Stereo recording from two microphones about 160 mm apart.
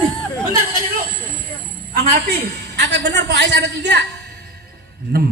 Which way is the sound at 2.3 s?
90° right.